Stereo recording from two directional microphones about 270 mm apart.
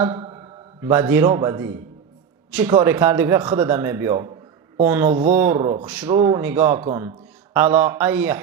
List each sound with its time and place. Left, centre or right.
0.8 s a man's voice: centre